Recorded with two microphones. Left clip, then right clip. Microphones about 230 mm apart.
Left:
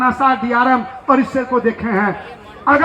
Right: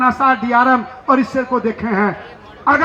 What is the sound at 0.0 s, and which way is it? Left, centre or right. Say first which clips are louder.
A man's voice: right 1 dB; right.